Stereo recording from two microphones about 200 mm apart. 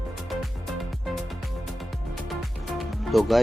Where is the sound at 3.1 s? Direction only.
Centre (ahead or behind).